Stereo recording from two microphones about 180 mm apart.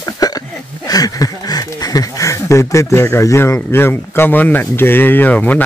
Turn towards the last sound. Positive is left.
turn(degrees=10)  # may be behind; listen again after turning